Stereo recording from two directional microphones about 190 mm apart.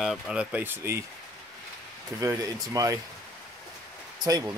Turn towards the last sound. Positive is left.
turn(degrees=-20)  # may be behind; listen again after turning